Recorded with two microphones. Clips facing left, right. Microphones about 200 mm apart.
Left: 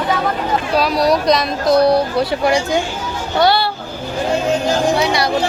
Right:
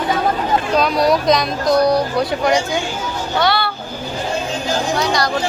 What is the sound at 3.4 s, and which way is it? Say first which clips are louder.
Speech: left 4 dB; 35° left (ahead or behind).